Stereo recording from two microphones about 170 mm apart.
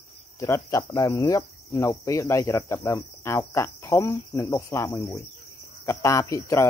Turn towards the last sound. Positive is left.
turn(degrees=20)  # may be behind; listen again after turning